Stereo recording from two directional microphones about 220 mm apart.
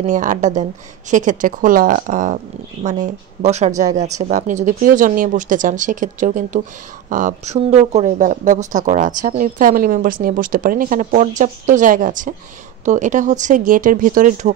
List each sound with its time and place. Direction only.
0.0 s speech: 35° right (ahead or behind)